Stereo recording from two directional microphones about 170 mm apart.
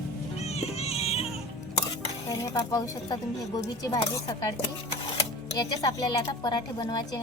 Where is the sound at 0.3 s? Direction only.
40° left (ahead or behind).